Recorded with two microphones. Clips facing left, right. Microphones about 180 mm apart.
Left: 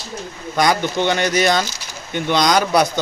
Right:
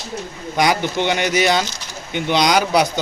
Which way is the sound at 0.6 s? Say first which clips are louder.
Left 1 dB; 15° right (ahead or behind).